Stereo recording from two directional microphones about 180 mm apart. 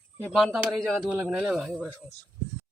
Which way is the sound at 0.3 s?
Centre (ahead or behind).